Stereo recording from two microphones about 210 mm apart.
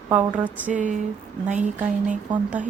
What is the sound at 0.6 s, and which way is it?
Speech, 40° right (ahead or behind).